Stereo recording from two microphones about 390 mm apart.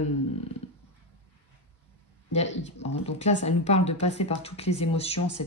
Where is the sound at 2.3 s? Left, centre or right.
Centre.